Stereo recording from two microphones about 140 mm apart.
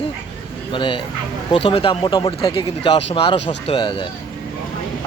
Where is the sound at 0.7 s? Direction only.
35° left (ahead or behind).